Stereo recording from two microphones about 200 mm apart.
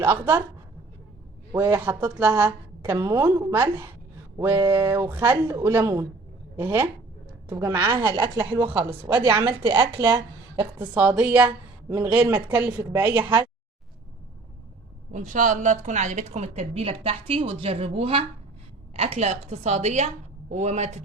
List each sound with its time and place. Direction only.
0.0 s a woman's voice: 10° right (ahead or behind)
1.5 s a woman's voice: 10° right (ahead or behind)
8.6 s a woman's voice: 10° right (ahead or behind)
9.6 s speech: 25° right (ahead or behind)
10.8 s a woman's voice: 10° right (ahead or behind)
15.1 s a woman's voice: 40° right (ahead or behind)